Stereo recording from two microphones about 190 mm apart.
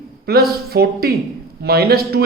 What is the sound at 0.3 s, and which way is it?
A man's voice, 55° right (ahead or behind).